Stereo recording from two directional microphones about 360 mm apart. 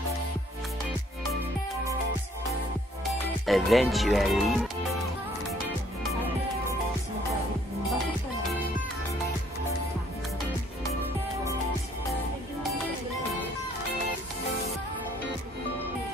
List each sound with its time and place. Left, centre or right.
3.4 s speech: centre